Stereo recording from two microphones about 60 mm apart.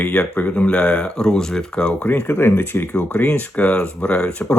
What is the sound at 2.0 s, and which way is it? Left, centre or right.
Speech, left.